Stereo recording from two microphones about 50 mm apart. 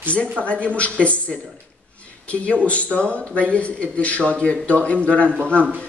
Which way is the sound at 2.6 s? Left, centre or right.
Left.